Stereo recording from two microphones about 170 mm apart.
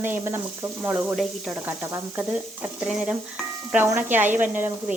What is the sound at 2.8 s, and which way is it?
Speech, 5° right (ahead or behind).